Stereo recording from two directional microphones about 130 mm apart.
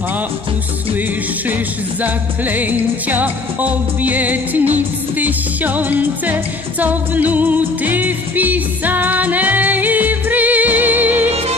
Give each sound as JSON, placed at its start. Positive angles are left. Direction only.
{"t": 2.0, "sound": "music", "side_deg": -15}